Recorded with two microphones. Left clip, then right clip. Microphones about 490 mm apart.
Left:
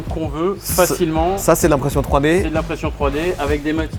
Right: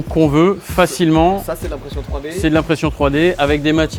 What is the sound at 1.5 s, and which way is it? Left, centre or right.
Speech, left.